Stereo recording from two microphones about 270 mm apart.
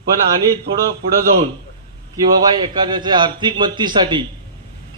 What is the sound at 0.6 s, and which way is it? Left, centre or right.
Speech, right.